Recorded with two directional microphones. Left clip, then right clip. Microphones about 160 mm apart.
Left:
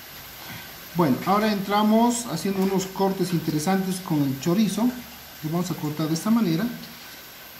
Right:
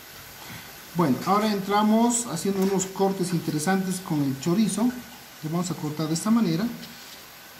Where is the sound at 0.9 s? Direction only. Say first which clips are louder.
Left 1 dB; 5° right (ahead or behind).